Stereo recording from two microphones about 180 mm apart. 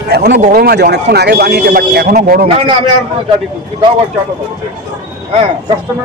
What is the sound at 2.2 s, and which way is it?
Speech, 50° right (ahead or behind).